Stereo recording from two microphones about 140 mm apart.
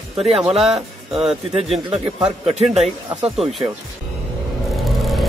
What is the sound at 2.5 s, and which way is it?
Speech, 50° right (ahead or behind).